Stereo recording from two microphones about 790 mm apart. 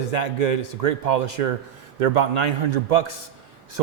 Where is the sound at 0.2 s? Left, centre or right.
Right.